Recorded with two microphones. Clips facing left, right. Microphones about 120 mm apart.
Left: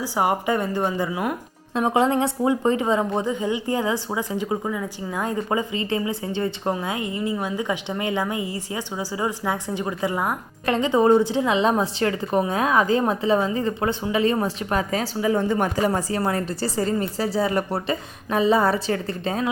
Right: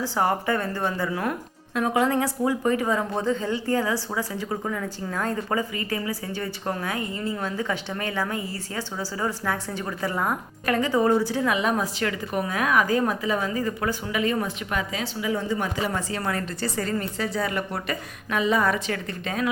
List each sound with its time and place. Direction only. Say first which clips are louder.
0.0 s a woman's voice: left 2 dB; 10° left (ahead or behind)
1.7 s a woman's voice: left 3 dB; 25° left (ahead or behind)